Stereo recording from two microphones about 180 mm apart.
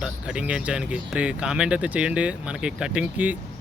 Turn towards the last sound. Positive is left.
turn(degrees=-10)  # may be behind; listen again after turning